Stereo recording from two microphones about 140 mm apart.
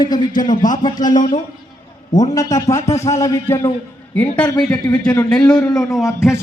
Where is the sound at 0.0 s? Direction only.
30° left (ahead or behind).